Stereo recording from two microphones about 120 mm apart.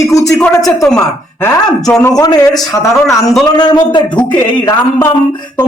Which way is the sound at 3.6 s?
40° left (ahead or behind).